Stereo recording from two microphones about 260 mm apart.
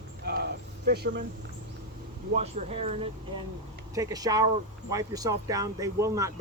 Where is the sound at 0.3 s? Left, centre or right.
Right.